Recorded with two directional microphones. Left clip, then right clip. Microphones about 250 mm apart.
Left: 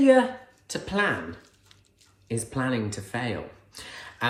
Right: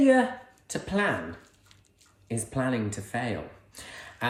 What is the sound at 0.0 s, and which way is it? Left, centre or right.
Speech, centre.